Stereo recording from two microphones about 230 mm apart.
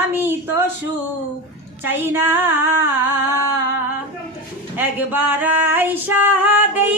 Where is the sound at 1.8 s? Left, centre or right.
Centre.